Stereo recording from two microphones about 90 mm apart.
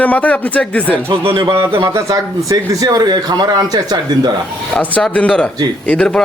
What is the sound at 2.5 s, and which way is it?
Speech, 45° right (ahead or behind).